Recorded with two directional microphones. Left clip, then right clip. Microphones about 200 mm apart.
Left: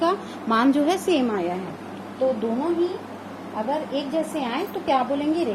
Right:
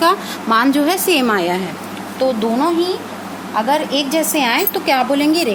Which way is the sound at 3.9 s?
50° right (ahead or behind).